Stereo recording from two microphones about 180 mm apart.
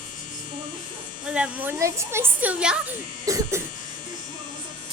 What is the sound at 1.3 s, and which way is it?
A woman's voice, 10° right (ahead or behind).